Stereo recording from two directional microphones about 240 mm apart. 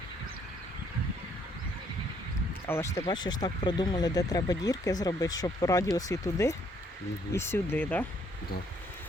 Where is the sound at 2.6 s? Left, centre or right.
Centre.